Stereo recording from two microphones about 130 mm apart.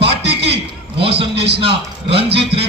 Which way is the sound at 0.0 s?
50° right (ahead or behind).